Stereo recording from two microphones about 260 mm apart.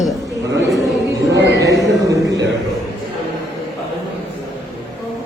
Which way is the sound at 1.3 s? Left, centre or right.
Right.